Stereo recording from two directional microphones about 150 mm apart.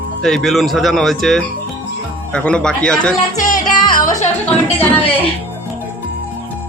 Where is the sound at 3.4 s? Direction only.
60° left (ahead or behind).